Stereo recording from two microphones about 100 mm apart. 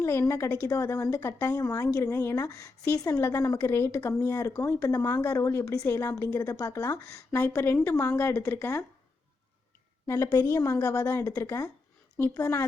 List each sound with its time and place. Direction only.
0.0 s a woman's voice: 25° left (ahead or behind)
10.4 s a woman's voice: 30° left (ahead or behind)